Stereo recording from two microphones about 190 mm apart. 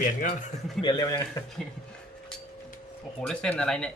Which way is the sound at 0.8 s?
20° left (ahead or behind).